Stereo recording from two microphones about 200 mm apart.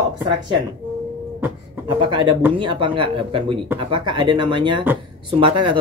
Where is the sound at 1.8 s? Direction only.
25° right (ahead or behind).